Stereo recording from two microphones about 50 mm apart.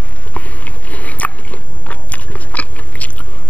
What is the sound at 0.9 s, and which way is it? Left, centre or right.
Biting, left.